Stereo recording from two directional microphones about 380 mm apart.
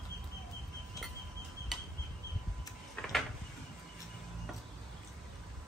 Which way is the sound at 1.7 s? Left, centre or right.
Centre.